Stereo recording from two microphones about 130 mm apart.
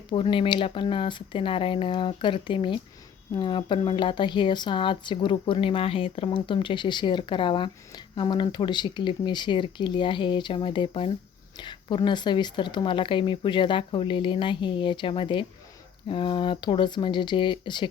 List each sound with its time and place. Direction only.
0.1 s speech: 40° left (ahead or behind)